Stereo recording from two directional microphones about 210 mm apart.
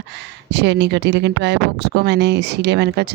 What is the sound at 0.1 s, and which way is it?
A woman's voice, 55° right (ahead or behind).